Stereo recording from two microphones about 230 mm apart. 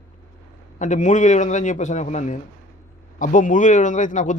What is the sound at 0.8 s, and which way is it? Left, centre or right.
Speech, left.